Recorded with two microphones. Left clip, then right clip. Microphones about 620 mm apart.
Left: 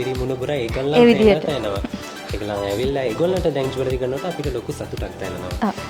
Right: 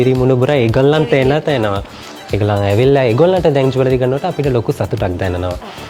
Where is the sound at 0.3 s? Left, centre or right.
Right.